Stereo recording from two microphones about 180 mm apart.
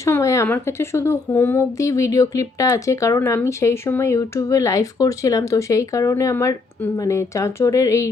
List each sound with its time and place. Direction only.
0.0 s speech: 15° left (ahead or behind)